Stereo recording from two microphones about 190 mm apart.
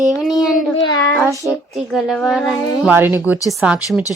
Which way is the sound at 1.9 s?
Centre (ahead or behind).